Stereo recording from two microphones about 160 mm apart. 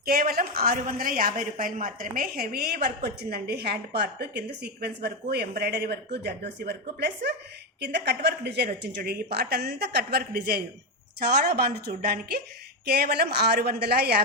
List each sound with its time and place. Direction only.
0.0 s a woman's voice: 65° right (ahead or behind)
12.8 s a woman's voice: 80° right